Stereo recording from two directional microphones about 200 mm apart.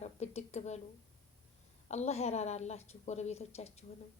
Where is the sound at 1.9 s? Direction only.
35° left (ahead or behind).